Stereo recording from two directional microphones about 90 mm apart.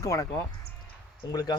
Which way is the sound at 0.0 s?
40° left (ahead or behind).